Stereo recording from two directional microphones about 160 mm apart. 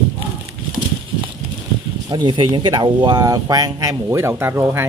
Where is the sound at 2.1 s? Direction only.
30° right (ahead or behind).